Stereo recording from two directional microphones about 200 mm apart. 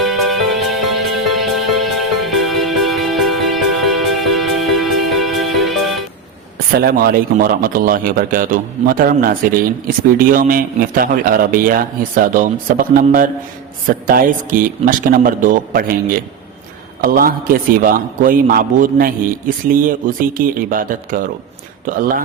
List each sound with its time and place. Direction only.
0.0 s music: centre (ahead or behind)
6.7 s a man's voice: 50° right (ahead or behind)